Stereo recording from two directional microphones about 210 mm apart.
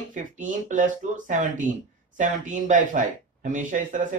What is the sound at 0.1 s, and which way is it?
Speech, 35° right (ahead or behind).